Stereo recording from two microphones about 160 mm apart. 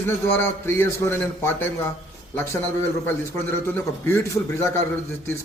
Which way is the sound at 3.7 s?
15° left (ahead or behind).